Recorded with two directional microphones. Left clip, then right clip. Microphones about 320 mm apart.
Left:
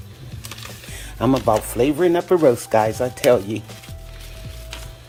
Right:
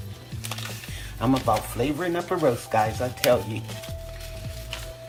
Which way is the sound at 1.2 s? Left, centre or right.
Left.